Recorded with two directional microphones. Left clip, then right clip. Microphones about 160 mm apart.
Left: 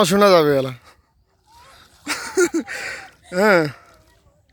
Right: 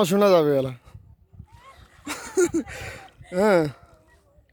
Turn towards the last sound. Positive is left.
turn(degrees=-5)  # may be behind; listen again after turning